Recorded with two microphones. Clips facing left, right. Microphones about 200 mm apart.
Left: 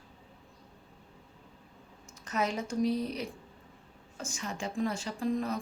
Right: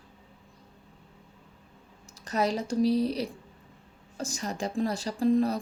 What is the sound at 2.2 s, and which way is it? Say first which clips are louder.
A woman's voice: right 4 dB; 35° right (ahead or behind).